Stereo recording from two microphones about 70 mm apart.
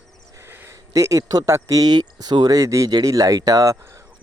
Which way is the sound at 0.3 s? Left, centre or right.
Right.